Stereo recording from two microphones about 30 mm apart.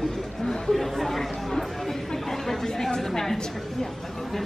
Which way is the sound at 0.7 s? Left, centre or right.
Centre.